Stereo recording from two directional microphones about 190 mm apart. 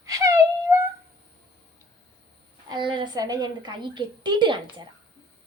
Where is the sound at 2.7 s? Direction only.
25° right (ahead or behind).